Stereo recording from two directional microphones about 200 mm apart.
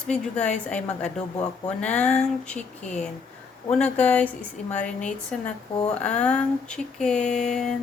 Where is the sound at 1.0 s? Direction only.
35° left (ahead or behind).